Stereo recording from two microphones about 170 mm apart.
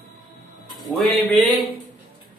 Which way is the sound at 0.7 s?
Centre (ahead or behind).